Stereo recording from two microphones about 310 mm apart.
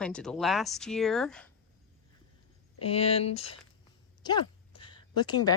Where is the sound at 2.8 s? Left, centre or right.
Centre.